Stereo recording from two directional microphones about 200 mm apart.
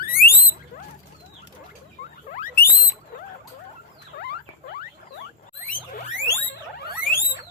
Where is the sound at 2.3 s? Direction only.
45° left (ahead or behind).